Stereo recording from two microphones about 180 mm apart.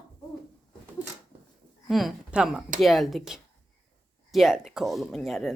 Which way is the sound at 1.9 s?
Centre (ahead or behind).